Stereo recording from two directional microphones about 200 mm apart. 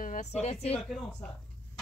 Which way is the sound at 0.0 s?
40° left (ahead or behind).